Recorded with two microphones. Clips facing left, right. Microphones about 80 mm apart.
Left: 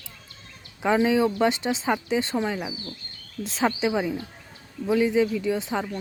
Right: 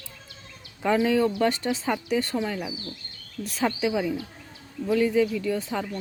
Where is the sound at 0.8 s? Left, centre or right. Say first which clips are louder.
Left 1 dB; centre.